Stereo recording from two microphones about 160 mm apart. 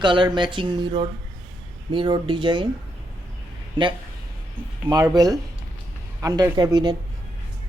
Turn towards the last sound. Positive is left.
turn(degrees=-25)  # may be behind; listen again after turning